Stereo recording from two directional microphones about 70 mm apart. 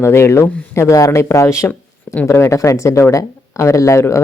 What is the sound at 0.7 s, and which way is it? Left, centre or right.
Speech, left.